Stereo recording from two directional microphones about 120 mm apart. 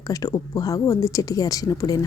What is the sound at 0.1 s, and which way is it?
Speech, 30° left (ahead or behind).